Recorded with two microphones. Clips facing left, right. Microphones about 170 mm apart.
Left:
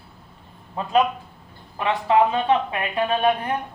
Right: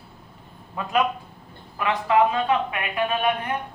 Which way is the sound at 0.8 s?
30° left (ahead or behind).